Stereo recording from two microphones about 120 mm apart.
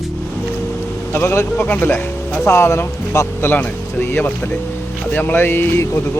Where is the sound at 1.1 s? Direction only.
20° left (ahead or behind).